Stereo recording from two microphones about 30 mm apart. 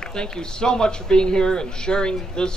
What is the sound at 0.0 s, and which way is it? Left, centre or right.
A woman's voice, left.